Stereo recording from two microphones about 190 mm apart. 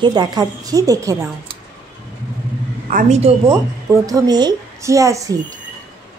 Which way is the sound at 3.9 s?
20° right (ahead or behind).